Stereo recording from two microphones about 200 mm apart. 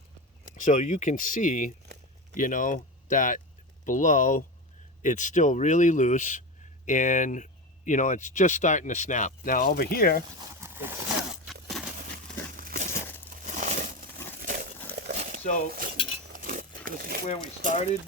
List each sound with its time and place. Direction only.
0.5 s speech: 40° left (ahead or behind)
10.5 s a sound: 10° right (ahead or behind)
12.5 s crumpling: 45° right (ahead or behind)
15.1 s a sound: 35° right (ahead or behind)
15.7 s cutlery: 45° right (ahead or behind)
17.6 s speech: 40° right (ahead or behind)